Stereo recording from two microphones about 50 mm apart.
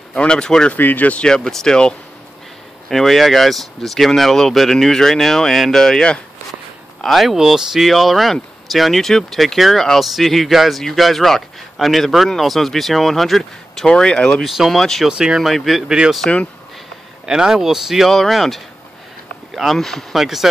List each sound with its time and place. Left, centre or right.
0.1 s speech: centre
0.7 s speech: left
1.2 s speech: centre
2.9 s speech: centre
7.2 s speech: centre; by 14.3 s left
14.4 s speech: centre
15.0 s speech: centre
15.4 s speech: centre
16.3 s speech: left
17.3 s speech: centre
18.1 s speech: centre